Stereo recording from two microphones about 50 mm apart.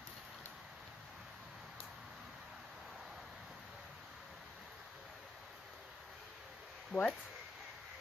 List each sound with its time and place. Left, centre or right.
6.9 s speech: left